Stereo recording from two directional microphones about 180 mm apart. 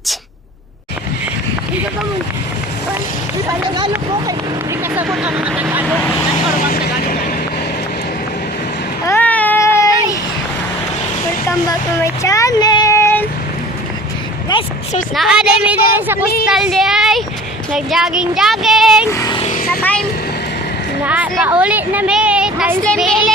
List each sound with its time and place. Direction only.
4.9 s speech: 5° right (ahead or behind)
6.7 s vehicle: 60° left (ahead or behind)
9.0 s a sound: 10° left (ahead or behind)
11.4 s speech: 15° left (ahead or behind)
14.5 s speech: 25° left (ahead or behind)
15.1 s speech: centre (ahead or behind)
19.1 s speech: 20° left (ahead or behind)
19.4 s vehicle: 45° left (ahead or behind)
19.8 s vehicle: 10° left (ahead or behind)
21.0 s a woman's voice: 10° right (ahead or behind)